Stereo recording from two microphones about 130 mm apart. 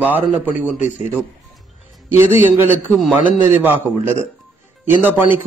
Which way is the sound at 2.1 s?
15° right (ahead or behind).